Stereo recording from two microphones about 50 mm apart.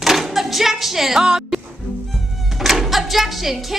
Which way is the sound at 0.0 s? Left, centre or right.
Centre.